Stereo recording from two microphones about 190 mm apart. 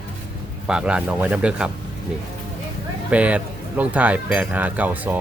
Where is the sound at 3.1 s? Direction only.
5° right (ahead or behind).